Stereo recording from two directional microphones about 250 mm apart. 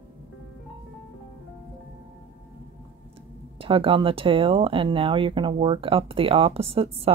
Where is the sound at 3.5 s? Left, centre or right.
Right.